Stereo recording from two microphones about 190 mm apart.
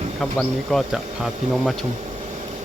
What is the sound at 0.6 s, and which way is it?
Speech, centre (ahead or behind).